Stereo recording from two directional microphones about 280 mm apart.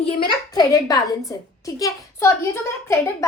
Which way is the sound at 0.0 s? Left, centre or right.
Centre.